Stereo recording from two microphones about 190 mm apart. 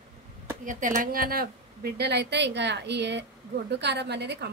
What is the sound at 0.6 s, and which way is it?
Speech, 45° right (ahead or behind).